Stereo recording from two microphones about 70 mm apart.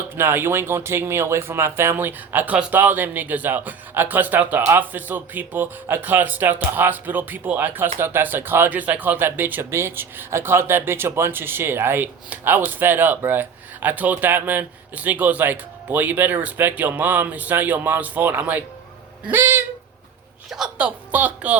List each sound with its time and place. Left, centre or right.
0.2 s speech: right
20.5 s speech: centre